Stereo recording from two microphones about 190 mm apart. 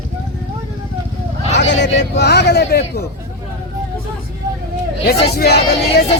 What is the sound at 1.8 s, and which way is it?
Speech, 65° left (ahead or behind).